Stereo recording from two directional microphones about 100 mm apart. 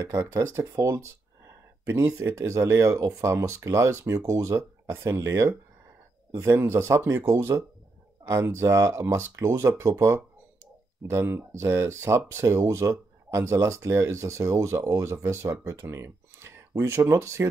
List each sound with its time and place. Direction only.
0.0 s speech: 30° right (ahead or behind)